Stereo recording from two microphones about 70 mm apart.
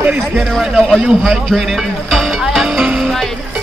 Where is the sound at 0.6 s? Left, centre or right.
Centre.